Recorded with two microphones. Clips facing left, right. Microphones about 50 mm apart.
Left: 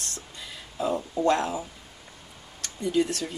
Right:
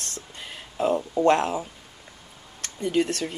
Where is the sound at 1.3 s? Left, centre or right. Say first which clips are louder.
Right 3 dB; right.